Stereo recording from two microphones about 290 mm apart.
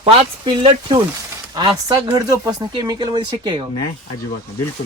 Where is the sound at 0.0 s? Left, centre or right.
Centre.